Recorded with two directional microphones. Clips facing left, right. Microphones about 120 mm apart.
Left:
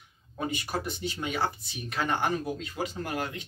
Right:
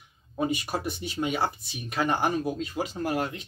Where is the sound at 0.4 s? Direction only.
25° right (ahead or behind).